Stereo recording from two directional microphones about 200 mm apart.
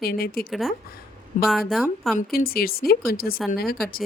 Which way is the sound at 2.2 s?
50° left (ahead or behind).